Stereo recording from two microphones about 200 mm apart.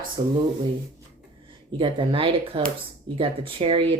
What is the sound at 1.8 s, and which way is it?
Speech, 25° right (ahead or behind).